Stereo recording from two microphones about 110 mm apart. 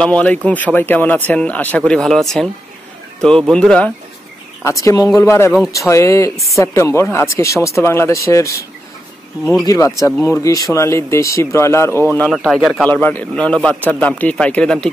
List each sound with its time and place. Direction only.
0.0 s speech: 10° left (ahead or behind)
4.6 s speech: 30° left (ahead or behind)
9.7 s speech: 30° left (ahead or behind)
12.2 s speech: centre (ahead or behind)
12.9 s speech: 15° left (ahead or behind)